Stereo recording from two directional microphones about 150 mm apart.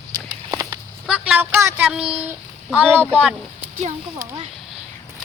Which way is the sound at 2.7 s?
10° right (ahead or behind).